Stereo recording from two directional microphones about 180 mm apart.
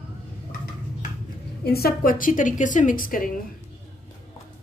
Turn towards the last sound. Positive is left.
turn(degrees=50)  # may be behind; listen again after turning